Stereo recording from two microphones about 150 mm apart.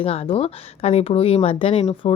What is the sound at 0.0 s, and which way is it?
Speech, 40° left (ahead or behind).